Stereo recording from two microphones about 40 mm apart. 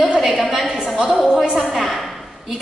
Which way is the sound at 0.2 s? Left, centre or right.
Centre.